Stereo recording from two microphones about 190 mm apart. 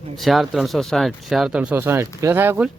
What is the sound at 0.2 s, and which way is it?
Speech, centre (ahead or behind).